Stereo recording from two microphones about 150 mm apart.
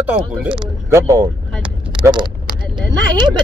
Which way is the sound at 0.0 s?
10° right (ahead or behind).